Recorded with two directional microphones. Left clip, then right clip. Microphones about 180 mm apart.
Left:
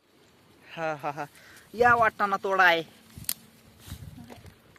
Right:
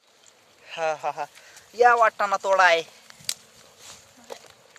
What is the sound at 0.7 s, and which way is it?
Speech, centre (ahead or behind).